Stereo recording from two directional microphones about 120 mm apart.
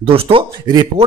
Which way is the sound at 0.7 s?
35° right (ahead or behind).